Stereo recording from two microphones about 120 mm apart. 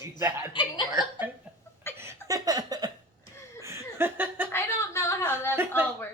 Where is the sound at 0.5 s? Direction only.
40° left (ahead or behind).